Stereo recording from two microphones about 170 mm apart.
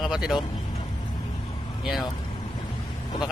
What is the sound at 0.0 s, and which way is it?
Vehicle, centre (ahead or behind).